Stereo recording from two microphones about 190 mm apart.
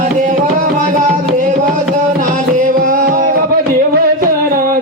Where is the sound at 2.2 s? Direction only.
45° right (ahead or behind).